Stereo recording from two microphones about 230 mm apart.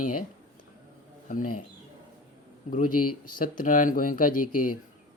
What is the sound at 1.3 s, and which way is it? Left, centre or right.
Speech, left.